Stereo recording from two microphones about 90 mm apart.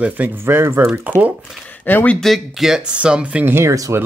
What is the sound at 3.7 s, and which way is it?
Speech, 40° right (ahead or behind).